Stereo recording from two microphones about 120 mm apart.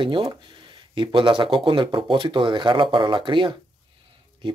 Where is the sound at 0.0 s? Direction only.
45° right (ahead or behind).